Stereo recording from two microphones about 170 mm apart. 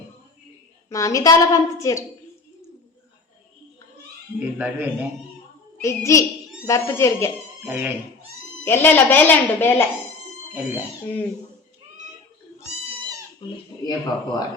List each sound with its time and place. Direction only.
0.9 s a woman's voice: 20° left (ahead or behind)
4.4 s a man's voice: 10° right (ahead or behind)
5.7 s a woman's voice: 15° left (ahead or behind)
7.6 s a man's voice: 10° right (ahead or behind)
8.6 s a woman's voice: 10° left (ahead or behind)
10.5 s a man's voice: 10° right (ahead or behind)
12.5 s goat: 40° right (ahead or behind)
13.4 s a woman's voice: 25° left (ahead or behind)